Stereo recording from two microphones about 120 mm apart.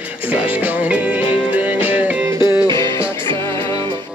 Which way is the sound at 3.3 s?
25° left (ahead or behind).